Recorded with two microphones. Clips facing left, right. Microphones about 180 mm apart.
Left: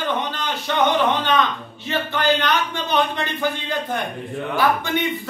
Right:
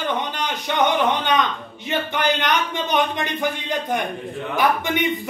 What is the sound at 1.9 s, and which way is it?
A man's voice, 20° right (ahead or behind).